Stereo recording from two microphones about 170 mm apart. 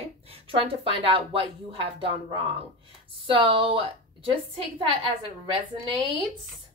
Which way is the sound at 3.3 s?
30° right (ahead or behind).